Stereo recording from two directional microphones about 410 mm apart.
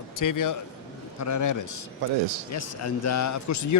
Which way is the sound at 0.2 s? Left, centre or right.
Left.